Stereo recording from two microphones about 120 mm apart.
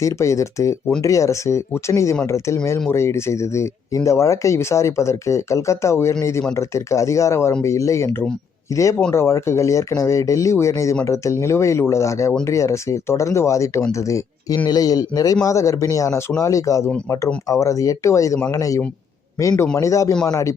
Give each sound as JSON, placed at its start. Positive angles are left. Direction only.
{"t": 0.0, "sound": "a man's voice", "side_deg": 25}